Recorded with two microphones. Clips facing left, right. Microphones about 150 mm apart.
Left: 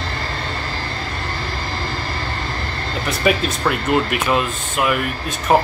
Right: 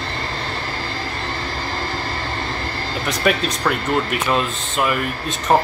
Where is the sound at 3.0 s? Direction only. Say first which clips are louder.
Left 1 dB; 5° left (ahead or behind).